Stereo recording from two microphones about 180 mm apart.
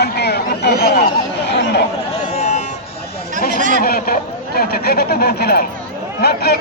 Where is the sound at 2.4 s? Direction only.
40° left (ahead or behind).